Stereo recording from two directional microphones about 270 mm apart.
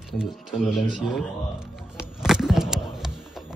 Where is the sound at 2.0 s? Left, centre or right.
Centre.